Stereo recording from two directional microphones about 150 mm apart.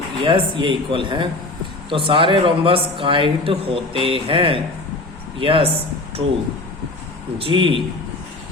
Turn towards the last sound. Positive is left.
turn(degrees=-35)  # may be behind; listen again after turning